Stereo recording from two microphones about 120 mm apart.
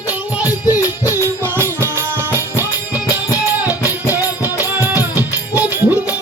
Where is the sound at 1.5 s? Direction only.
20° right (ahead or behind).